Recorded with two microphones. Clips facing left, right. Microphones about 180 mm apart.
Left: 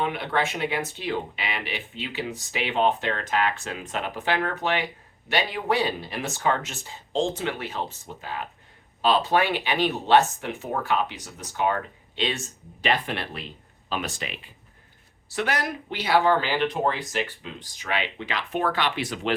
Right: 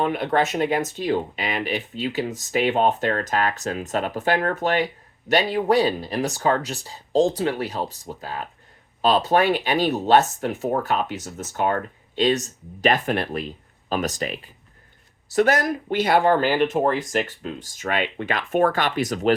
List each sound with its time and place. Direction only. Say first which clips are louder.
0.0 s speech: right 5 dB; 40° right (ahead or behind)